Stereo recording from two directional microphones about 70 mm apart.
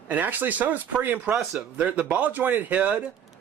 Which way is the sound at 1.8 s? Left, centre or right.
Right.